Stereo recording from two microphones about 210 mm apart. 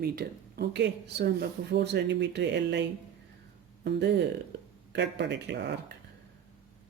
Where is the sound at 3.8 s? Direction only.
55° right (ahead or behind).